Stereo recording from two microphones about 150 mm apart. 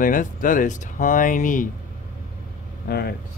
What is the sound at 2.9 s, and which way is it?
Speech, 90° left.